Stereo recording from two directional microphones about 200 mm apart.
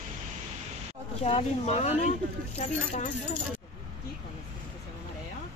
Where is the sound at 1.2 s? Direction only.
30° left (ahead or behind).